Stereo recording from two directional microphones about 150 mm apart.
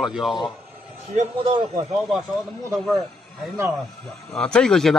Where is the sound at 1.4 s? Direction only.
30° right (ahead or behind).